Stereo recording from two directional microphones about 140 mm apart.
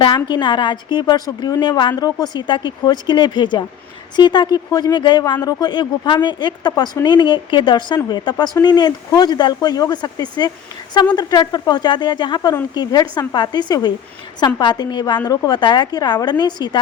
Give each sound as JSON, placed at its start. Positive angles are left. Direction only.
{"t": 0.0, "sound": "a woman's voice", "side_deg": 35}